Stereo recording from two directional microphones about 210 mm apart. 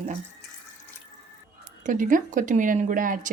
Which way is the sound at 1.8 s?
40° right (ahead or behind).